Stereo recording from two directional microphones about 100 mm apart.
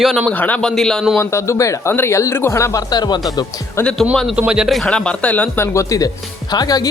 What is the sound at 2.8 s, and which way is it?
Speech, 45° left (ahead or behind).